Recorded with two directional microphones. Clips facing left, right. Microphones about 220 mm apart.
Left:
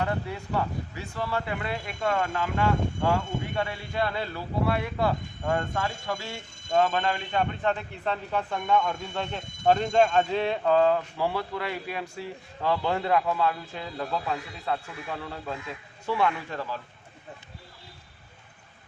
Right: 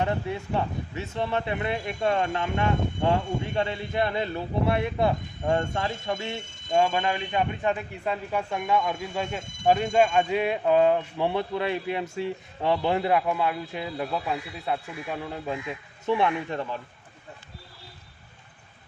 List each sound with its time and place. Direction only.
0.0 s speech: 20° right (ahead or behind)
6.7 s a man's voice: 10° right (ahead or behind)